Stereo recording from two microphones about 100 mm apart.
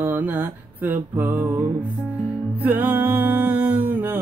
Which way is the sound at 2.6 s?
20° right (ahead or behind).